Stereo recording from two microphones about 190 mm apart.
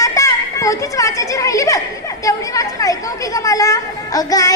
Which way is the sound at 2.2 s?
15° left (ahead or behind).